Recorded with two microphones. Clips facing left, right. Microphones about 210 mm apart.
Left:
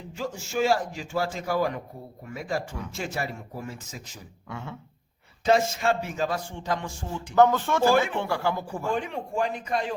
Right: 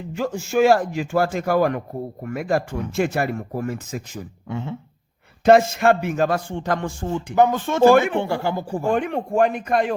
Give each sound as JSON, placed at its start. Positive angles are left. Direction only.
{"t": 0.2, "sound": "speech", "side_deg": -55}
{"t": 4.4, "sound": "a sound", "side_deg": -20}
{"t": 5.5, "sound": "speech", "side_deg": -60}
{"t": 7.3, "sound": "speech", "side_deg": -15}
{"t": 7.9, "sound": "speech", "side_deg": -60}
{"t": 8.2, "sound": "speech", "side_deg": -25}
{"t": 8.9, "sound": "speech", "side_deg": -60}